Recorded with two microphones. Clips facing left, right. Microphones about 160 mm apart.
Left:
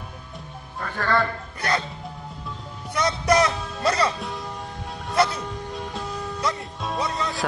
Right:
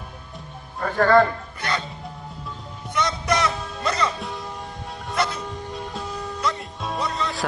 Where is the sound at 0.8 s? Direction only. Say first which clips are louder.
Right 8 dB; 45° right (ahead or behind).